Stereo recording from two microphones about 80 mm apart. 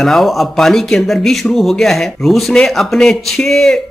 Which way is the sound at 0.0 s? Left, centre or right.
Centre.